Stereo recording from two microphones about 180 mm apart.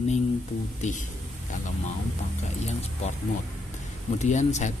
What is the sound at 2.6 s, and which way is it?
Speech, 35° left (ahead or behind).